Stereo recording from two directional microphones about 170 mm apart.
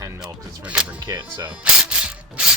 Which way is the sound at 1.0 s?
25° right (ahead or behind).